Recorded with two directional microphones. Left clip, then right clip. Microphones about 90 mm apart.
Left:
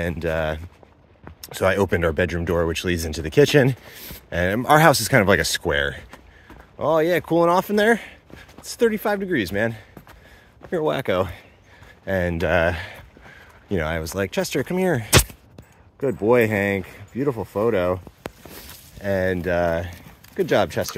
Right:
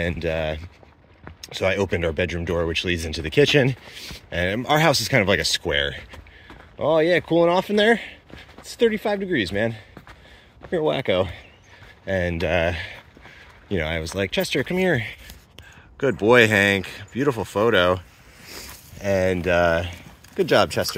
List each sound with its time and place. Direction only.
0.2 s speech: 20° left (ahead or behind)
1.5 s speech: 60° left (ahead or behind)
2.7 s speech: 45° left (ahead or behind)
4.6 s speech: 65° left (ahead or behind)
5.7 s speech: 40° left (ahead or behind)
6.8 s speech: 5° right (ahead or behind)
7.3 s speech: 10° left (ahead or behind)
12.1 s speech: 30° left (ahead or behind); by 14.9 s 5° left (ahead or behind)
16.0 s speech: 20° right (ahead or behind)
17.2 s speech: 20° right (ahead or behind)
19.0 s speech: 10° right (ahead or behind)